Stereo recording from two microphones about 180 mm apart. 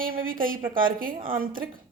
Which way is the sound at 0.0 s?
50° right (ahead or behind).